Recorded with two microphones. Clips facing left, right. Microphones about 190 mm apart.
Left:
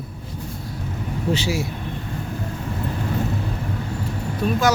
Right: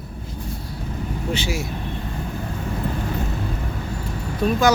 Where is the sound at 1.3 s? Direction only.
35° left (ahead or behind).